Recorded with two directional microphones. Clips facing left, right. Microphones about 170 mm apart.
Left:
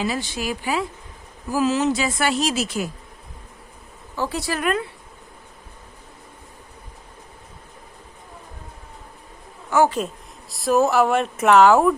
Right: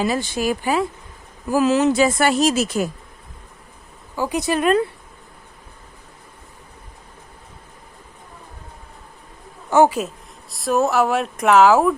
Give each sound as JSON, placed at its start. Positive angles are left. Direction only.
{"t": 0.0, "sound": "speech", "side_deg": -50}
{"t": 1.5, "sound": "speech", "side_deg": -60}
{"t": 4.1, "sound": "speech", "side_deg": -15}
{"t": 9.6, "sound": "a sound", "side_deg": -25}
{"t": 10.5, "sound": "speech", "side_deg": 0}